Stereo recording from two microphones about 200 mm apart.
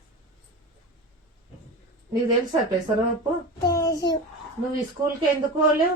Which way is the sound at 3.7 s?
20° left (ahead or behind).